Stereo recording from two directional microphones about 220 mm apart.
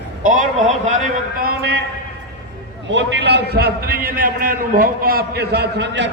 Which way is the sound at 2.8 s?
55° right (ahead or behind).